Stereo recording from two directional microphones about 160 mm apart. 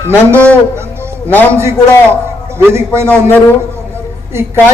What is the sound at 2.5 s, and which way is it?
Speech, 15° right (ahead or behind).